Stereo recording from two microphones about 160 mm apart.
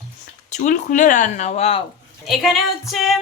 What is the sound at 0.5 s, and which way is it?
Speech, 55° left (ahead or behind).